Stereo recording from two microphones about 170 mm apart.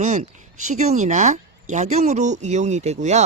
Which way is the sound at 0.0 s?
45° right (ahead or behind).